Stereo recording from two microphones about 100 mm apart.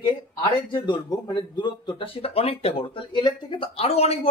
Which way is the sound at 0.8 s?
45° left (ahead or behind).